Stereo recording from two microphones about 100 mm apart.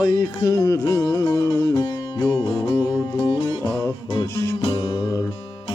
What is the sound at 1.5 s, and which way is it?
Music, 45° left (ahead or behind).